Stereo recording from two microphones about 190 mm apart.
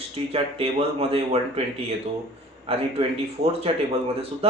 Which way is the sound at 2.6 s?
30° right (ahead or behind).